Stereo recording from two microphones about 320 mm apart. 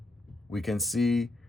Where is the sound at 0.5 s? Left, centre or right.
Centre.